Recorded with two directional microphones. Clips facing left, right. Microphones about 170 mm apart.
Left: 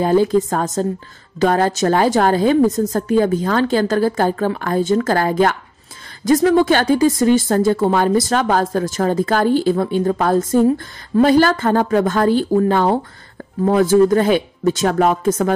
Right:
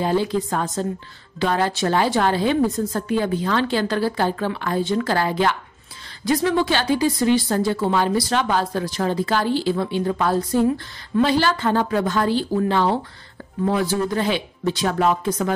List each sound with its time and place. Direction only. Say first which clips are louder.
0.0 s a woman's voice: left 6 dB; 45° left (ahead or behind)